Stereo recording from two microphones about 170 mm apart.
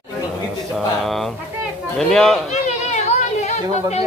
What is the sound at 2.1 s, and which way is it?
Speech, 5° left (ahead or behind).